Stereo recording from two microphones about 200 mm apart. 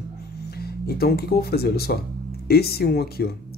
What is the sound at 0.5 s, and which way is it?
Speech, 50° left (ahead or behind).